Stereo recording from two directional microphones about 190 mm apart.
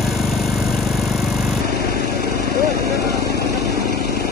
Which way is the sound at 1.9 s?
55° left (ahead or behind).